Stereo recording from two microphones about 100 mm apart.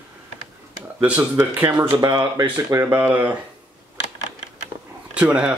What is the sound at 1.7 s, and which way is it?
Speech, 40° right (ahead or behind).